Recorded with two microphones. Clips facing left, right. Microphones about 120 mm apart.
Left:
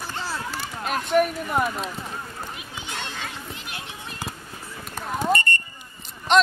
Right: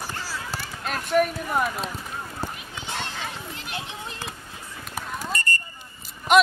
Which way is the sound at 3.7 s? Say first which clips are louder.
Right 2 dB; 25° right (ahead or behind).